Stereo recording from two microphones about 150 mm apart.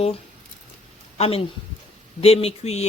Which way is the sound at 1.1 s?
40° left (ahead or behind).